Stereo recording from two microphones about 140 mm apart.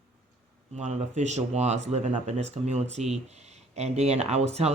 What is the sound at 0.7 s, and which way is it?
Speech, 55° right (ahead or behind).